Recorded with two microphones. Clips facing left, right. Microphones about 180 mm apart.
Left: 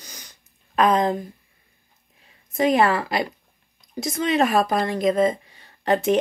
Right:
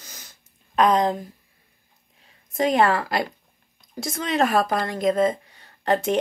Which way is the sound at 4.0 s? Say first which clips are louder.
Left 2 dB; 20° left (ahead or behind).